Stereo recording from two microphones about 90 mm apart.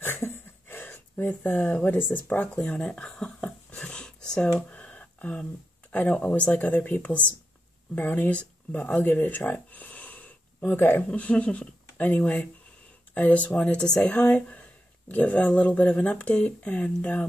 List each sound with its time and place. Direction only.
0.0 s speech: 30° left (ahead or behind)